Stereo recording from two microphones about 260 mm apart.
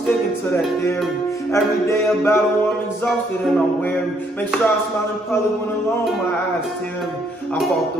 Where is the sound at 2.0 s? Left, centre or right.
Centre.